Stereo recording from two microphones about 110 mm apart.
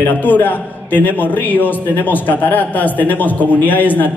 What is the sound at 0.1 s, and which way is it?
A man's voice, 15° left (ahead or behind).